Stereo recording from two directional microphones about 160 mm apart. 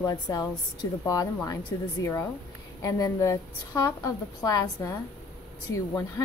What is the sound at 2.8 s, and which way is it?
A woman's voice, 20° left (ahead or behind).